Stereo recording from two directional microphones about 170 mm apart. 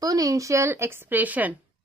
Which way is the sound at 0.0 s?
20° right (ahead or behind).